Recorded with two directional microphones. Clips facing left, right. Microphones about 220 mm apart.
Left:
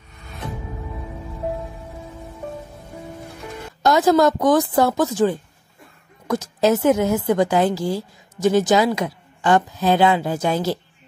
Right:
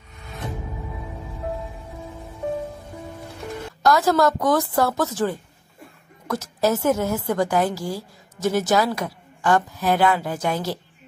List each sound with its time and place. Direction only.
3.8 s a woman's voice: 20° left (ahead or behind)